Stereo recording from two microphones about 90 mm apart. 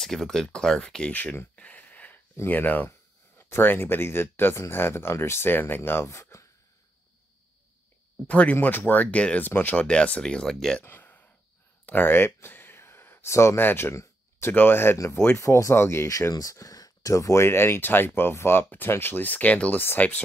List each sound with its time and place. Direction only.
0.0 s speech: 5° left (ahead or behind); by 1.6 s 20° left (ahead or behind)
1.6 s a sound: 15° left (ahead or behind)
2.3 s speech: 20° left (ahead or behind)
8.3 s speech: 15° left (ahead or behind)
10.8 s a sound: 20° left (ahead or behind)
11.8 s speech: 20° left (ahead or behind)